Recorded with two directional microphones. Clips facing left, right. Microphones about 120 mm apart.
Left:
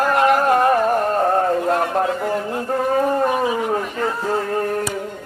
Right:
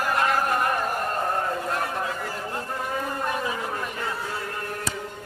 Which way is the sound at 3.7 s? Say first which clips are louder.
Left 9 dB; 45° left (ahead or behind).